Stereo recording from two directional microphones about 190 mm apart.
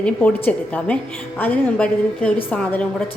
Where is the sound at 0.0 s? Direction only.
10° left (ahead or behind).